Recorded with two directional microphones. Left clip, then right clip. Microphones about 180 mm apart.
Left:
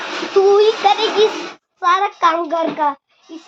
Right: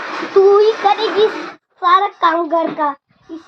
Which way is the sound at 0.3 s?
20° left (ahead or behind).